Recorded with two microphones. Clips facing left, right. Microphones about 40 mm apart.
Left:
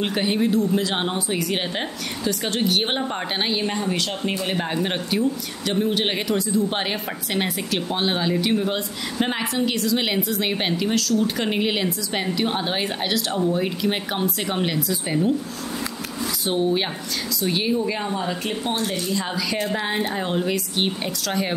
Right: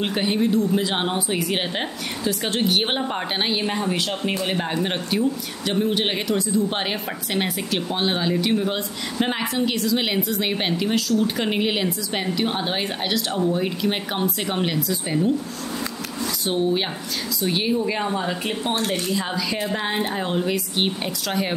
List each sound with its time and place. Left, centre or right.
0.0 s a woman's voice: centre
16.4 s a woman's voice: centre
18.8 s speech: right
19.1 s a woman's voice: centre